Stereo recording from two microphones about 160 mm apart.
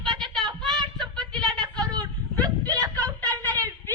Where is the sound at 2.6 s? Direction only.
25° right (ahead or behind).